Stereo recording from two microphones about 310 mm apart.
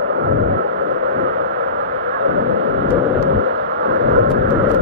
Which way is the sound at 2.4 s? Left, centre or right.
Right.